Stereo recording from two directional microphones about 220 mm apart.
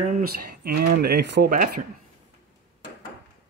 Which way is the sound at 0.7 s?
45° right (ahead or behind).